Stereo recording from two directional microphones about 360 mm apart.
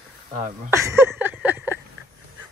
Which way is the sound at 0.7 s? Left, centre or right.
Centre.